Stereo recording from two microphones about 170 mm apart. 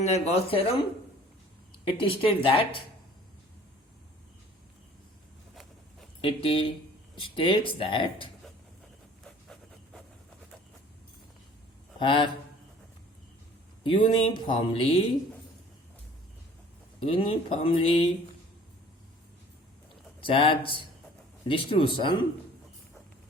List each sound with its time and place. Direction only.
0.0 s speech: 40° left (ahead or behind)
1.9 s speech: 30° left (ahead or behind)
6.2 s speech: 30° left (ahead or behind)
9.2 s a sound: 5° left (ahead or behind)
11.9 s speech: 30° left (ahead or behind)
13.8 s speech: 30° left (ahead or behind)
17.1 s speech: 30° left (ahead or behind)
20.2 s speech: 30° left (ahead or behind)